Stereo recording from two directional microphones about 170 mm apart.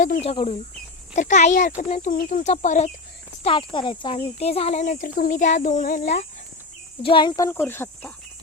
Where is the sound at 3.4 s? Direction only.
30° left (ahead or behind); by 6.2 s 50° left (ahead or behind).